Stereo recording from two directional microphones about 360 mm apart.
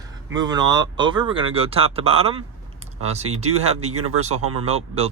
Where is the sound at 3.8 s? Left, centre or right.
Right.